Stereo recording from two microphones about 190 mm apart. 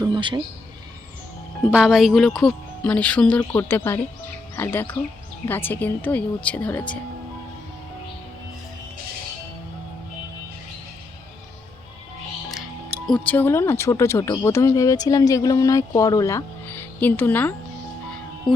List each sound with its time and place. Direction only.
0.0 s a sound: 25° right (ahead or behind)
1.7 s speech: 5° right (ahead or behind)
13.1 s speech: 5° left (ahead or behind)